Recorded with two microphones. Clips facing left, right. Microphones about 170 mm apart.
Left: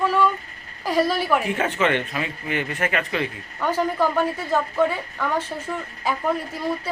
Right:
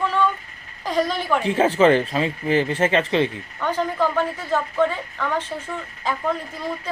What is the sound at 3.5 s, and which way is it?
A woman's voice, 10° left (ahead or behind).